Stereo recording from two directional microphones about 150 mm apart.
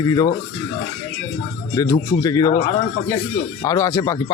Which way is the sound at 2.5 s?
55° left (ahead or behind).